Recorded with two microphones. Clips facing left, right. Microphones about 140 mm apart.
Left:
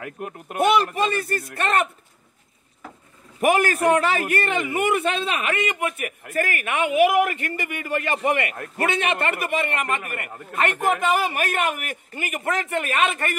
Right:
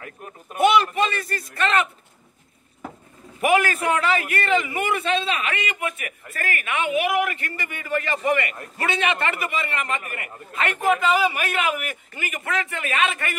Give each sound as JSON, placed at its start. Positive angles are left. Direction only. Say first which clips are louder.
{"t": 0.0, "sound": "speech", "louder": "left 6 dB", "side_deg": 75}
{"t": 0.6, "sound": "a man's voice", "louder": "right 1 dB", "side_deg": 50}
{"t": 3.4, "sound": "a man's voice", "louder": "left 2 dB", "side_deg": 45}